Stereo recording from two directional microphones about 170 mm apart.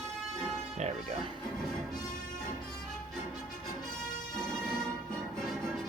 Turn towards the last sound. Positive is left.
turn(degrees=0)  # may be behind; listen again after turning